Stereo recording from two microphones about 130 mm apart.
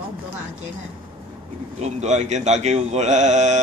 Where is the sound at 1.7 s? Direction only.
60° right (ahead or behind).